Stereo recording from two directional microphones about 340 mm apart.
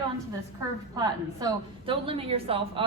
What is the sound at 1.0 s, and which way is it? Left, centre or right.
A woman's voice, centre.